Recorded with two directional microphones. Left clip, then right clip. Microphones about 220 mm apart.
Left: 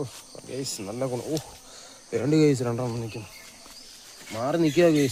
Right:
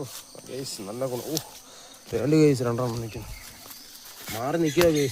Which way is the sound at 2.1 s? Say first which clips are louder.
Even; 5° left (ahead or behind).